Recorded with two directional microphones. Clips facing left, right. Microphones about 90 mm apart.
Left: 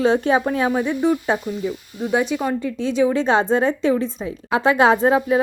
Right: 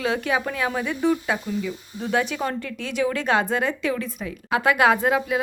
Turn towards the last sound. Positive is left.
turn(degrees=30)  # may be behind; listen again after turning